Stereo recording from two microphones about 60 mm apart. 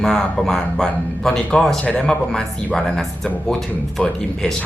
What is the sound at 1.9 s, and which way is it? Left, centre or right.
Speech, left.